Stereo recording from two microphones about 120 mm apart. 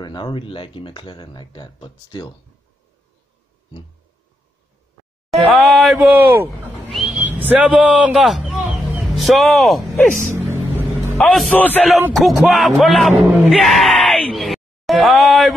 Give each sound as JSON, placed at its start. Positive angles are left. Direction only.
{"t": 0.0, "sound": "speech", "side_deg": 40}
{"t": 5.5, "sound": "a sound", "side_deg": 0}
{"t": 5.9, "sound": "speech", "side_deg": -15}
{"t": 6.9, "sound": "a sound", "side_deg": 0}
{"t": 7.2, "sound": "a man's voice", "side_deg": -15}
{"t": 8.1, "sound": "a man's voice", "side_deg": 0}
{"t": 10.3, "sound": "vehicle", "side_deg": -20}
{"t": 11.1, "sound": "speech", "side_deg": 5}
{"t": 12.1, "sound": "speech", "side_deg": 0}
{"t": 14.3, "sound": "a sound", "side_deg": 0}